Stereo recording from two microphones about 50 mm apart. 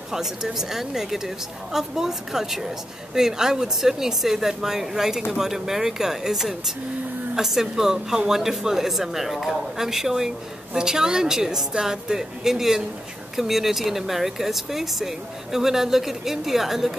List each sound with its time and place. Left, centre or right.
0.1 s speech: centre